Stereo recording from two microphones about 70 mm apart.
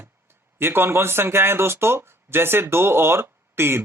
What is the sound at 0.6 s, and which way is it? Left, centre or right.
Speech, right.